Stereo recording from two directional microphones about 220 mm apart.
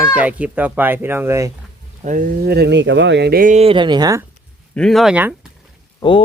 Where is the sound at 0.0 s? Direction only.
5° right (ahead or behind).